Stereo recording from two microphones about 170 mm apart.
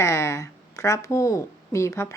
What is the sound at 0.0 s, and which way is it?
A woman's voice, 15° left (ahead or behind).